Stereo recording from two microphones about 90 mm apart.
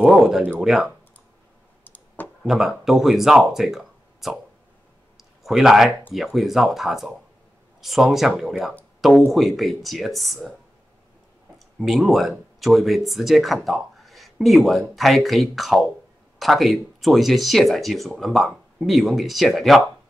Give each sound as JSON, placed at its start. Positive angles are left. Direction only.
{"t": 0.0, "sound": "speech", "side_deg": -5}
{"t": 1.9, "sound": "clicking", "side_deg": 20}
{"t": 2.4, "sound": "speech", "side_deg": -5}
{"t": 5.1, "sound": "a sound", "side_deg": -5}
{"t": 6.1, "sound": "speech", "side_deg": 0}
{"t": 11.5, "sound": "speech", "side_deg": 0}